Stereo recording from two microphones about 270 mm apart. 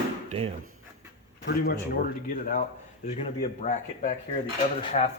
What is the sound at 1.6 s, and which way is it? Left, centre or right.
Speech, left.